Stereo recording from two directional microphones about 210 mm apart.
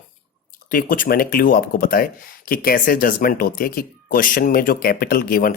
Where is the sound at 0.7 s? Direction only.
40° left (ahead or behind).